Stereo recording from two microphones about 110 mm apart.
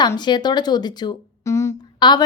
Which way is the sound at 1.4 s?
25° left (ahead or behind).